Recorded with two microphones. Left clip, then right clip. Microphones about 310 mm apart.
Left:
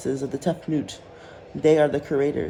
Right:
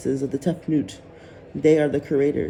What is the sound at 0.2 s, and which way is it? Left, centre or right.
Speech, left.